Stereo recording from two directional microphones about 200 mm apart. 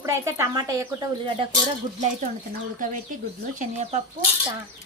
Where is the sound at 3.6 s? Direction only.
35° right (ahead or behind).